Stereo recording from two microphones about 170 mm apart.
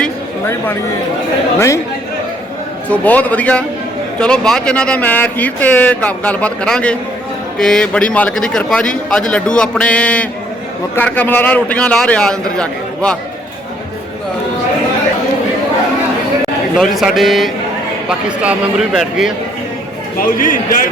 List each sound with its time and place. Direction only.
0.0 s a sound: 15° left (ahead or behind)
1.5 s speech: 15° left (ahead or behind)
2.9 s a man's voice: 10° left (ahead or behind)
16.7 s a man's voice: centre (ahead or behind)
20.1 s a man's voice: 55° left (ahead or behind)